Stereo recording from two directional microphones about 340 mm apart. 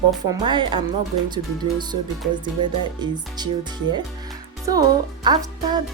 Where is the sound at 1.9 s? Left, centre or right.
Right.